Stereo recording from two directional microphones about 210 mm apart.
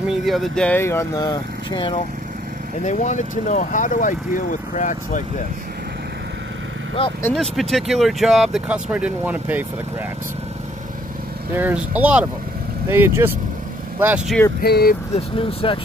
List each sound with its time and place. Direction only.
0.1 s speech: centre (ahead or behind); by 2.0 s 25° left (ahead or behind)
2.8 s speech: 35° left (ahead or behind)
7.2 s speech: centre (ahead or behind)
11.5 s speech: 10° right (ahead or behind)
14.6 s speech: 50° left (ahead or behind)
15.1 s speech: 25° left (ahead or behind)